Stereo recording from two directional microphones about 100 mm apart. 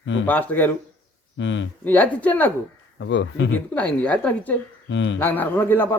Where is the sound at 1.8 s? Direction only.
15° left (ahead or behind).